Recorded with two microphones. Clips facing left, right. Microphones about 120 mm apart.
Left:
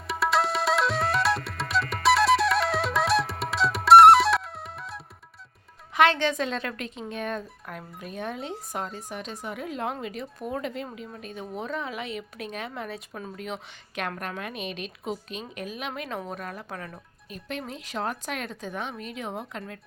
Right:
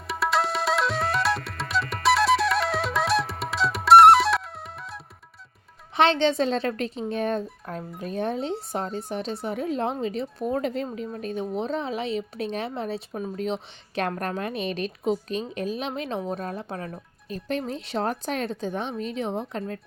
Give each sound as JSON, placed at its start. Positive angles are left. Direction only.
{"t": 0.1, "sound": "music", "side_deg": 0}
{"t": 6.0, "sound": "a woman's voice", "side_deg": -25}